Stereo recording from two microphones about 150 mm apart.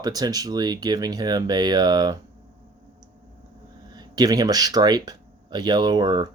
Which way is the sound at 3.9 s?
25° right (ahead or behind).